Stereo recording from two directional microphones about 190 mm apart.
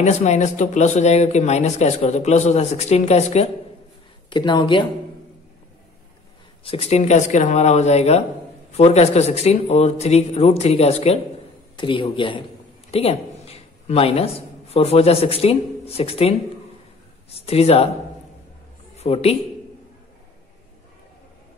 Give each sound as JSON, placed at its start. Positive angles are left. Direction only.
{"t": 0.0, "sound": "speech", "side_deg": 40}
{"t": 4.3, "sound": "a man's voice", "side_deg": 25}
{"t": 6.6, "sound": "a man's voice", "side_deg": 30}
{"t": 18.9, "sound": "speech", "side_deg": 30}